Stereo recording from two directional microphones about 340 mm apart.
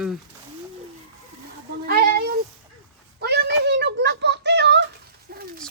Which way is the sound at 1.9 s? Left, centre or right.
Right.